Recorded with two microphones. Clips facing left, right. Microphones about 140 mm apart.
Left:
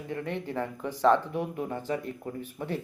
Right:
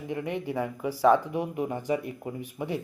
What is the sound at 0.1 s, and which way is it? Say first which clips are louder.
Speech: right 2 dB; 10° right (ahead or behind).